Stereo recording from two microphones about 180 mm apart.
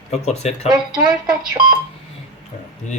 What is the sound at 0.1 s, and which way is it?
Speech, 35° left (ahead or behind).